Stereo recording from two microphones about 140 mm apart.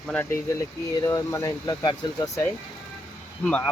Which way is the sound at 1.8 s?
35° left (ahead or behind).